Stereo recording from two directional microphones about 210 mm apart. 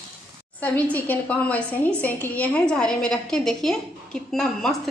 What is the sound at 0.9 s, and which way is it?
A woman's voice, 10° left (ahead or behind).